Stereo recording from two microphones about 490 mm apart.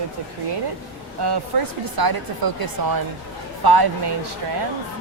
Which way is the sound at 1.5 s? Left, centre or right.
Right.